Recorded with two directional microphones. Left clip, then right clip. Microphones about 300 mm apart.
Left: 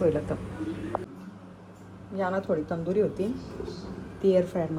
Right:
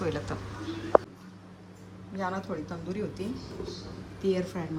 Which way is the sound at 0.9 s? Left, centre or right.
Left.